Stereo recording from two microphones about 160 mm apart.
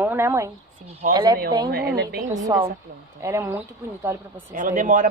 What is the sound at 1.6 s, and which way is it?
Speech, 85° right.